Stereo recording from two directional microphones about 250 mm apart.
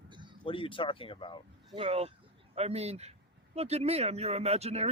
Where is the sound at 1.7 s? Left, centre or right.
Right.